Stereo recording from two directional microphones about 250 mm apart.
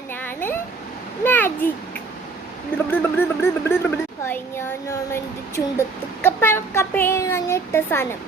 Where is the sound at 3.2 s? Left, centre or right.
Centre.